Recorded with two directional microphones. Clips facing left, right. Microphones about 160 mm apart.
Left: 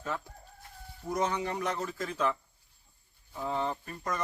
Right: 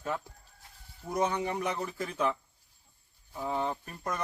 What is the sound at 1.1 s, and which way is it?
Speech, 10° right (ahead or behind).